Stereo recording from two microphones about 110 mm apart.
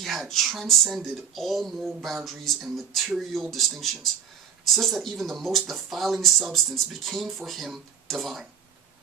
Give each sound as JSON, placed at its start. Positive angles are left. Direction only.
{"t": 0.0, "sound": "speech", "side_deg": 0}